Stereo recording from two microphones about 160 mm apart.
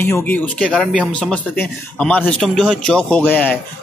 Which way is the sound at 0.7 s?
5° right (ahead or behind).